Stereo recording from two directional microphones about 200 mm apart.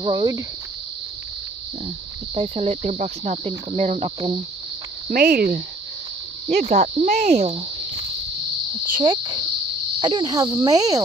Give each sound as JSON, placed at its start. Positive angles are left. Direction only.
{"t": 0.0, "sound": "speech", "side_deg": -20}
{"t": 2.3, "sound": "cricket", "side_deg": -30}
{"t": 5.1, "sound": "speech", "side_deg": -50}
{"t": 6.5, "sound": "cricket", "side_deg": -35}
{"t": 8.9, "sound": "speech", "side_deg": -20}
{"t": 9.9, "sound": "cricket", "side_deg": -25}